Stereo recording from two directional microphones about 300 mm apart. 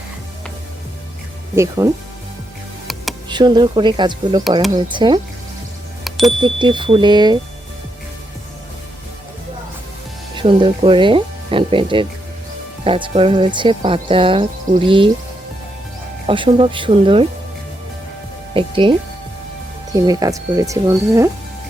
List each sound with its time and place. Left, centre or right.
1.5 s speech: centre
3.2 s speech: centre
6.1 s music: centre
6.4 s speech: centre
10.3 s speech: centre
16.2 s speech: centre
18.5 s speech: centre